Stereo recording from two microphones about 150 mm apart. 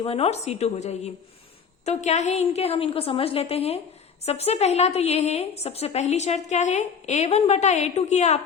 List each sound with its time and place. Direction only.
0.0 s a woman's voice: 40° left (ahead or behind)